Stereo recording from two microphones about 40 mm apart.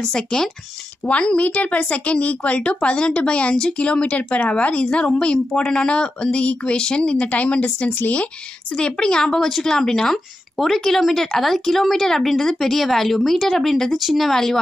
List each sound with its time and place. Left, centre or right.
0.0 s speech: centre
1.0 s a woman's voice: left
7.2 s a woman's voice: left
8.7 s speech: left
13.9 s speech: centre